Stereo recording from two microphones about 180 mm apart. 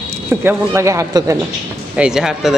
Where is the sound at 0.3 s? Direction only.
15° right (ahead or behind).